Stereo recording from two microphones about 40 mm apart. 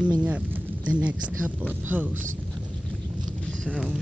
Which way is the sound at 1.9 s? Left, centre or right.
Right.